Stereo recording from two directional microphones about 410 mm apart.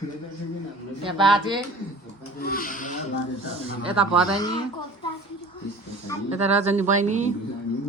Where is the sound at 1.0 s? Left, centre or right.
Centre.